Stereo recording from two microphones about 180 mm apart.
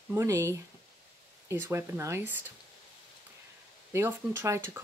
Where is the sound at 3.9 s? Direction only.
15° right (ahead or behind).